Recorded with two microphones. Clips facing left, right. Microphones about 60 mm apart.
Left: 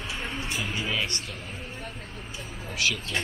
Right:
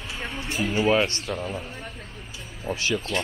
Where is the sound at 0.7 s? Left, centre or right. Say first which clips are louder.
Right 12 dB; right.